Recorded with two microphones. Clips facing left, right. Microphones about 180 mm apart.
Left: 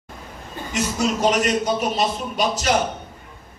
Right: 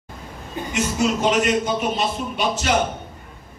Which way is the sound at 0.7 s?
40° left (ahead or behind).